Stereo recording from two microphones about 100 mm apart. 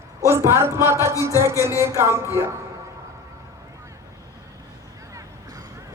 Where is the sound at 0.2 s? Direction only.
30° right (ahead or behind).